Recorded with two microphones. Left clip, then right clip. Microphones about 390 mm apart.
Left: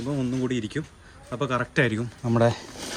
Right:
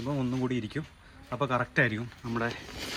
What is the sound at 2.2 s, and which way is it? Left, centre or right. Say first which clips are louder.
Speech: left 11 dB; centre.